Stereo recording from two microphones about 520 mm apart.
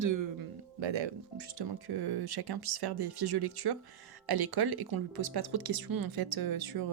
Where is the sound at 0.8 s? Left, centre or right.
Right.